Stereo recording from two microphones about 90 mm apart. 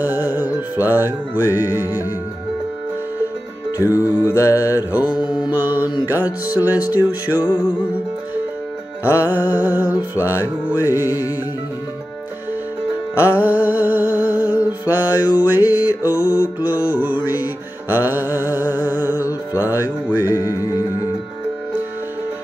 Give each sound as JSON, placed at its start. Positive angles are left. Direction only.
{"t": 0.0, "sound": "music", "side_deg": -20}
{"t": 4.0, "sound": "mantra", "side_deg": 35}
{"t": 4.6, "sound": "mantra", "side_deg": -20}
{"t": 6.0, "sound": "music", "side_deg": -20}
{"t": 9.2, "sound": "music", "side_deg": -20}
{"t": 13.3, "sound": "a sound", "side_deg": -20}
{"t": 17.8, "sound": "music", "side_deg": -20}